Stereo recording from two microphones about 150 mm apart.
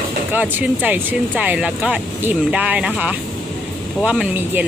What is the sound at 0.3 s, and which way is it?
Speech, 10° right (ahead or behind).